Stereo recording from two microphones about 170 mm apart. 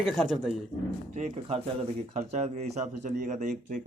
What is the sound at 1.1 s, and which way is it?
Speech, 40° right (ahead or behind).